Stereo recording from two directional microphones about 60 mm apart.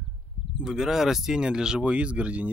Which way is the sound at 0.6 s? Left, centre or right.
Centre.